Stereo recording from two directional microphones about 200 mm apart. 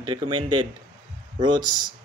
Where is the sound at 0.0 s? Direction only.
25° right (ahead or behind).